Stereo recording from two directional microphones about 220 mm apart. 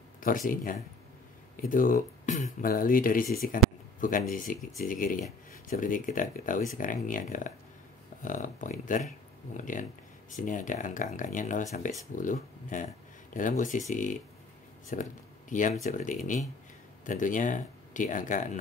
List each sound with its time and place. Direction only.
0.2 s speech: 40° left (ahead or behind)